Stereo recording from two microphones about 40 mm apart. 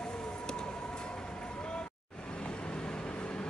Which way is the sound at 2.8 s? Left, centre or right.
Left.